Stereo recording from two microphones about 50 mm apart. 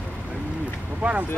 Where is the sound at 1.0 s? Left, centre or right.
Right.